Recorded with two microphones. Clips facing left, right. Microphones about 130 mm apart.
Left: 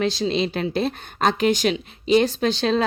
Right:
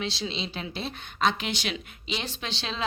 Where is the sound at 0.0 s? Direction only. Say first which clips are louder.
Left 11 dB; 45° left (ahead or behind).